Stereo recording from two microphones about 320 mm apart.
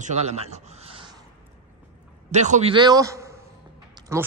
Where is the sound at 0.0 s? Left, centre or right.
Right.